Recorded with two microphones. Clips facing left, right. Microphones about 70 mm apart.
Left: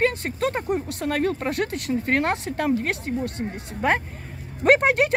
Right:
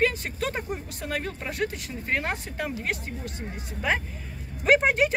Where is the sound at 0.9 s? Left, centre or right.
Left.